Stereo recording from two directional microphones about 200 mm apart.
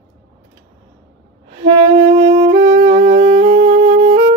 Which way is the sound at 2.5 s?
45° right (ahead or behind).